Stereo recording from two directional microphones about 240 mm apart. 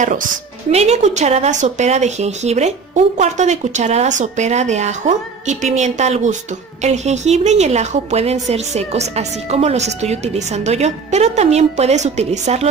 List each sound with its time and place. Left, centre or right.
0.0 s a woman's voice: right